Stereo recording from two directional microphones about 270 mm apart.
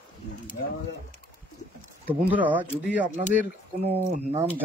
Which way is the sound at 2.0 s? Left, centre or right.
Centre.